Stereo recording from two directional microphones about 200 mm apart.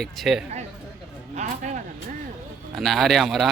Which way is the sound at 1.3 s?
35° right (ahead or behind).